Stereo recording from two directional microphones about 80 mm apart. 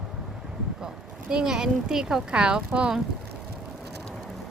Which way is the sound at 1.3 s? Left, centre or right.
Centre.